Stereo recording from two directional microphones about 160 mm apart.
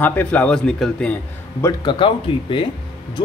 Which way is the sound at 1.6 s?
25° left (ahead or behind).